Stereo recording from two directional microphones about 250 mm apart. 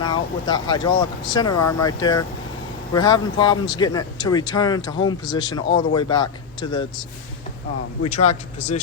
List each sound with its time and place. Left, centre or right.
0.0 s speech: centre
8.0 s speech: left